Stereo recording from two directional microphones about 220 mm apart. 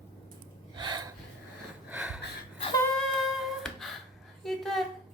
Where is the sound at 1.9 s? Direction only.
5° right (ahead or behind).